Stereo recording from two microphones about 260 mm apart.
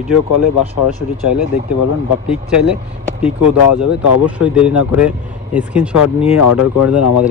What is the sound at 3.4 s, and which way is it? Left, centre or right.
Speech, left.